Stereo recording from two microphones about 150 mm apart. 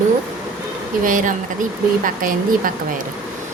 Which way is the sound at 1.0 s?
60° right (ahead or behind).